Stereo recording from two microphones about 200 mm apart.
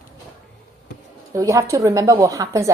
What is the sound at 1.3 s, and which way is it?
A woman's voice, 15° right (ahead or behind).